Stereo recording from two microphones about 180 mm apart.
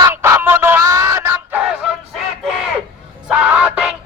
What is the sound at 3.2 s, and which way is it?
Music, 5° right (ahead or behind).